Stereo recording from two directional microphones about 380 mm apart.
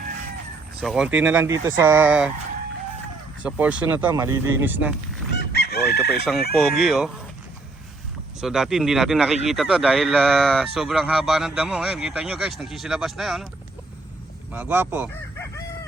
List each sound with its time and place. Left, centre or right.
0.8 s a man's voice: centre
3.4 s a man's voice: centre
5.3 s chicken: left
6.5 s a man's voice: centre
8.4 s a man's voice: centre
14.5 s a man's voice: centre